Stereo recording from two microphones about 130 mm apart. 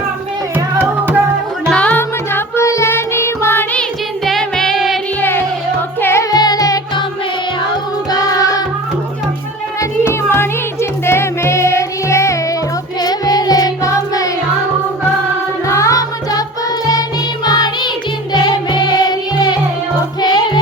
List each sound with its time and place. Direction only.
0.5 s music: 15° right (ahead or behind)
1.7 s music: 10° left (ahead or behind)
4.3 s music: 5° left (ahead or behind)
6.0 s music: 20° left (ahead or behind)
6.3 s music: 30° left (ahead or behind)
10.0 s music: 20° left (ahead or behind)
15.6 s music: 25° left (ahead or behind)
17.4 s music: 35° left (ahead or behind)